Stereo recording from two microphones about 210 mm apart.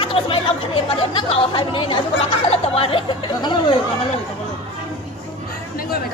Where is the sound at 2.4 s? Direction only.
30° left (ahead or behind).